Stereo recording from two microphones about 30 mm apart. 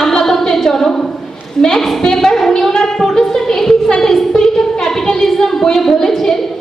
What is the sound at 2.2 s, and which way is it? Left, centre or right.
A woman's voice, centre.